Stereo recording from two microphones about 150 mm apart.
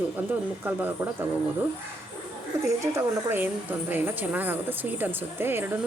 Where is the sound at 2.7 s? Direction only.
20° right (ahead or behind).